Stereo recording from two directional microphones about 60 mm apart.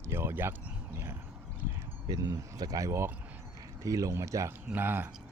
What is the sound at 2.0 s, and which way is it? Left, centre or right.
Speech, right.